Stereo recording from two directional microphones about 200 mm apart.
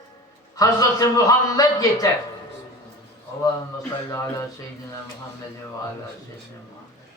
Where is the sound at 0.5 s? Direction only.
20° left (ahead or behind).